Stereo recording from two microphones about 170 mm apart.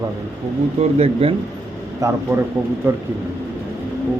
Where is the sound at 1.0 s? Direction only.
35° right (ahead or behind).